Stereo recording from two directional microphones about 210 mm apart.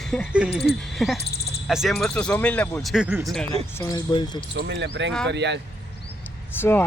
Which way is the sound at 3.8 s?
20° left (ahead or behind).